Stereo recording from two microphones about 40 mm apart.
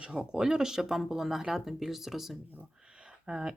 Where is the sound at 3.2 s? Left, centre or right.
Centre.